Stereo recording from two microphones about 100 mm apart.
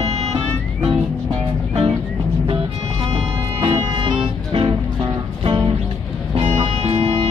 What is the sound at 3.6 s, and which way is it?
Music, 50° right (ahead or behind).